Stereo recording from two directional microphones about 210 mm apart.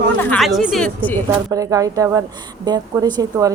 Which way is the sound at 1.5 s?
15° right (ahead or behind).